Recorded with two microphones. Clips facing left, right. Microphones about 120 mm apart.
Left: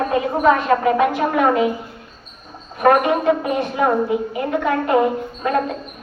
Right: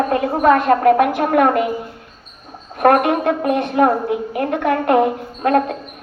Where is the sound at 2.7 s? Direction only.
60° right (ahead or behind).